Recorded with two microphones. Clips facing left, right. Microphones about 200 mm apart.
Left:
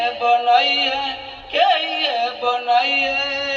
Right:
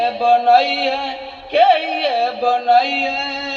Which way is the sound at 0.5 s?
55° right (ahead or behind).